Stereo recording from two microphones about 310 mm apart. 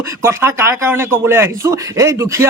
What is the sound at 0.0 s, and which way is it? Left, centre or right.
Speech, centre.